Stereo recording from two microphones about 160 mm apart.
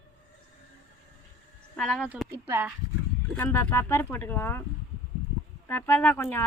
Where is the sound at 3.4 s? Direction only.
15° left (ahead or behind).